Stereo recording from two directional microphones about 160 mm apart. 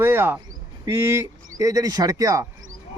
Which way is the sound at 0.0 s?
15° right (ahead or behind).